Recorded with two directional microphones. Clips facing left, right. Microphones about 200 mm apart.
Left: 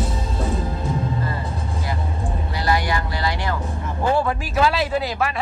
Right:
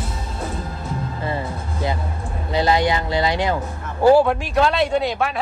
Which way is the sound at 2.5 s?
20° right (ahead or behind).